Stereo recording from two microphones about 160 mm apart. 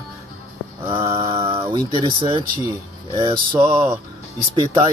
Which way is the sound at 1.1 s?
30° right (ahead or behind).